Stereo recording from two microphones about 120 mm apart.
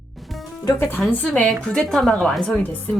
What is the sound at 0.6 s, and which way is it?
Speech, 20° left (ahead or behind).